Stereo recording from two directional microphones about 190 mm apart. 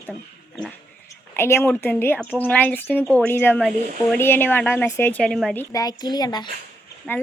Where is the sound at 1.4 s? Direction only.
10° left (ahead or behind).